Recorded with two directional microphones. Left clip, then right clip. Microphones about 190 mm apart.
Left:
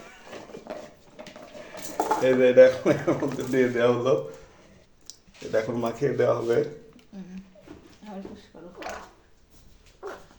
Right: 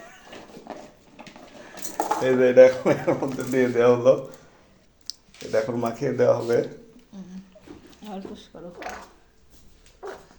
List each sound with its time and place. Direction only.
2.2 s speech: 10° right (ahead or behind)
5.5 s speech: 10° right (ahead or behind)
8.5 s speech: 30° right (ahead or behind)
10.0 s dog: 15° right (ahead or behind)